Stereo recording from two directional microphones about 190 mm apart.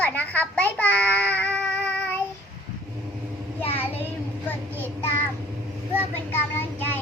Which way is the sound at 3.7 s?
10° left (ahead or behind).